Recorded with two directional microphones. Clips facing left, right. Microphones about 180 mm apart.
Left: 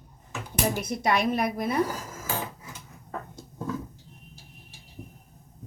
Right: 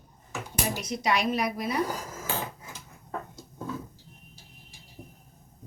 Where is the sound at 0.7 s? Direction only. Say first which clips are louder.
Even; 55° left (ahead or behind).